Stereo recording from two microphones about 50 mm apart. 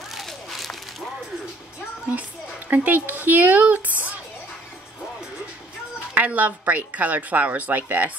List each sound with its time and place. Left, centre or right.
0.1 s a sound: centre
2.7 s speech: right
6.1 s speech: right